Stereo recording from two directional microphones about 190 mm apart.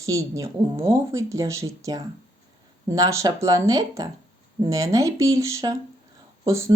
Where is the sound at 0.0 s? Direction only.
15° right (ahead or behind).